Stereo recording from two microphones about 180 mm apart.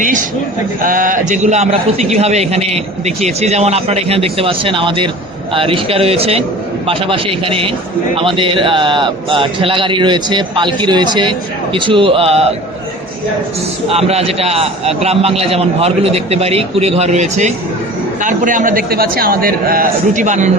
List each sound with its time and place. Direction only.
0.9 s a man's voice: 50° right (ahead or behind)
13.9 s a man's voice: 35° right (ahead or behind)